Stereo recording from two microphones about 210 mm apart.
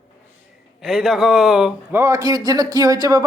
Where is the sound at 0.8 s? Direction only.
Centre (ahead or behind).